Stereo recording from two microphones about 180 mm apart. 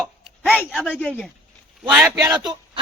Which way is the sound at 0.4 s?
5° left (ahead or behind).